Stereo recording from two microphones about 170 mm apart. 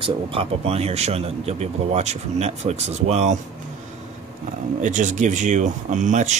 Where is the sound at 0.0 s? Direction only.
35° right (ahead or behind).